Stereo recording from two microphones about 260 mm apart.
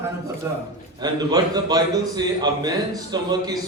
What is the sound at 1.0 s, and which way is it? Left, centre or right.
A man's voice, centre.